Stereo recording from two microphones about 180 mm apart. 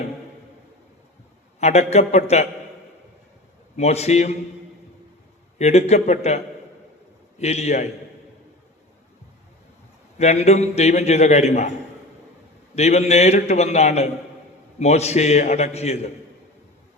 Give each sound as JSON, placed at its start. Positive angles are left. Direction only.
{"t": 1.5, "sound": "a man's voice", "side_deg": 40}
{"t": 3.8, "sound": "a man's voice", "side_deg": 35}
{"t": 5.5, "sound": "a man's voice", "side_deg": 35}
{"t": 10.2, "sound": "a man's voice", "side_deg": 35}
{"t": 12.7, "sound": "a man's voice", "side_deg": 40}